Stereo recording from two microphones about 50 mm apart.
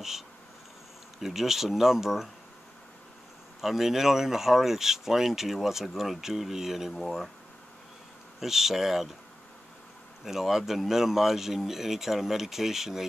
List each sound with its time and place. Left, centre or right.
1.2 s speech: centre
3.6 s speech: centre
8.4 s speech: centre
10.2 s speech: centre